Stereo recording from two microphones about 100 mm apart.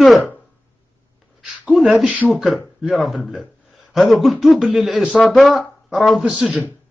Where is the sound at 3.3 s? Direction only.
Centre (ahead or behind).